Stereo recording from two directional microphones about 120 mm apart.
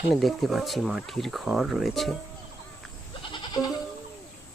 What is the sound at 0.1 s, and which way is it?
Speech, centre (ahead or behind).